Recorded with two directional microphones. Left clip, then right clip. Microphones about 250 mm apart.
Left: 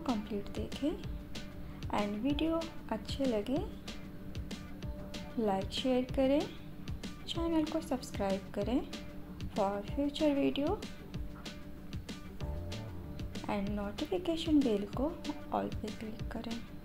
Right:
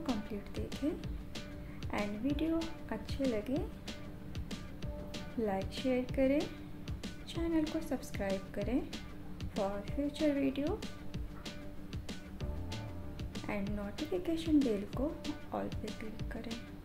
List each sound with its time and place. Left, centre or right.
0.0 s music: centre
1.9 s a woman's voice: centre
5.1 s a woman's voice: centre
13.3 s a woman's voice: centre